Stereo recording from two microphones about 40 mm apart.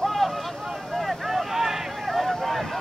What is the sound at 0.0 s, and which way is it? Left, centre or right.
Vehicle, centre.